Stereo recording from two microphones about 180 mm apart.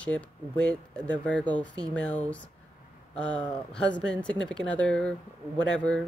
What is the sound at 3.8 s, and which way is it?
Speech, 85° left.